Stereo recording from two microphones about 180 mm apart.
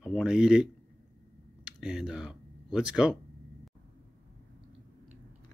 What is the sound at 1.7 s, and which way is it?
Speech, centre (ahead or behind).